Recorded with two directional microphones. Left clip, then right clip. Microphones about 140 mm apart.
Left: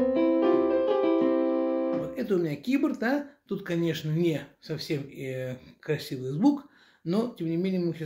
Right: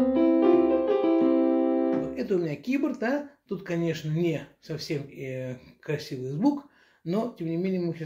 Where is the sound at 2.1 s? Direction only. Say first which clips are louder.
Even; 40° left (ahead or behind).